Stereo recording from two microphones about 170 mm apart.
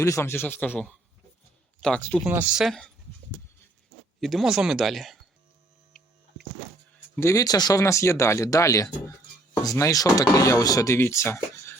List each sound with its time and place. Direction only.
0.0 s speech: 15° left (ahead or behind)
2.2 s speech: 10° right (ahead or behind)
2.6 s speech: 5° left (ahead or behind)
4.2 s speech: centre (ahead or behind)
5.9 s hum: 5° left (ahead or behind)
7.2 s speech: 20° left (ahead or behind)